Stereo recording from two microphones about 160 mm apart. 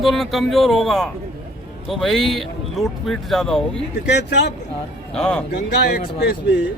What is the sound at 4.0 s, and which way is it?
Speech, 90° left.